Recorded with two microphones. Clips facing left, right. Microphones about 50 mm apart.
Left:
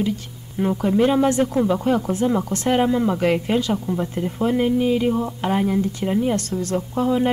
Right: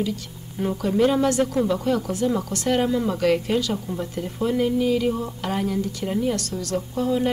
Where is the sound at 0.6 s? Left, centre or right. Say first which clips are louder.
Left 2 dB; left.